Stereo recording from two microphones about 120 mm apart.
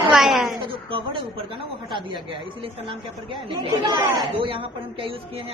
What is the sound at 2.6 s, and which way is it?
A woman's voice, 45° right (ahead or behind).